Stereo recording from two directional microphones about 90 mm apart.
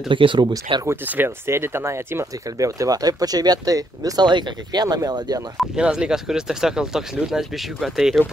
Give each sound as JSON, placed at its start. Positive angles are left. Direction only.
{"t": 0.1, "sound": "speech", "side_deg": -65}
{"t": 0.8, "sound": "speech", "side_deg": -20}
{"t": 5.8, "sound": "speech", "side_deg": -10}